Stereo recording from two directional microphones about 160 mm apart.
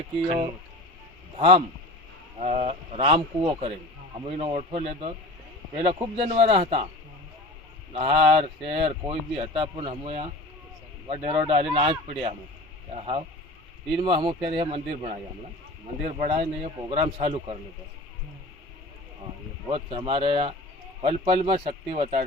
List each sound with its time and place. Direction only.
1.4 s speech: 40° right (ahead or behind)
7.9 s speech: 35° right (ahead or behind)
19.6 s speech: 35° right (ahead or behind)